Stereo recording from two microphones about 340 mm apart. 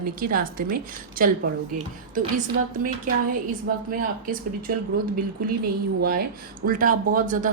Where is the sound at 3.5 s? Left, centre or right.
Right.